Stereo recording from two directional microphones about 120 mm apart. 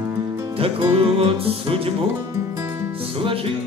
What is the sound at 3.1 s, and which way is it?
Music, 50° right (ahead or behind).